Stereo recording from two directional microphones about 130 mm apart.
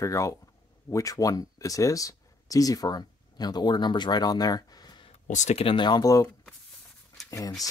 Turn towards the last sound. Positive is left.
turn(degrees=25)  # may be behind; listen again after turning